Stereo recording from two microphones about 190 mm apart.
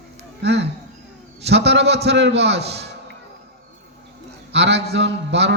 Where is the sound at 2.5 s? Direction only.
35° right (ahead or behind).